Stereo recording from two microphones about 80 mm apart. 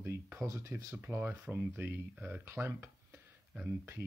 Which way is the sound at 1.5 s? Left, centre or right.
Right.